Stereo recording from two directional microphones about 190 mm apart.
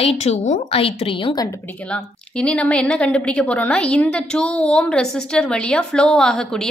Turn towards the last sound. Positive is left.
turn(degrees=5)  # may be behind; listen again after turning